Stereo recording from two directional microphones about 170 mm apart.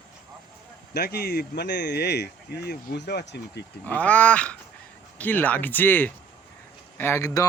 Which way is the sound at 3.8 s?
10° left (ahead or behind).